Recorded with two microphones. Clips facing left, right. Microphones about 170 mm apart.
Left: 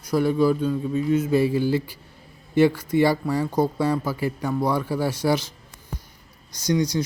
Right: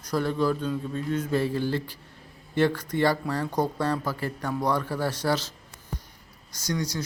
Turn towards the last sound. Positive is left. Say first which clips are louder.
# left 8 dB
turn(degrees=15)  # may be behind; listen again after turning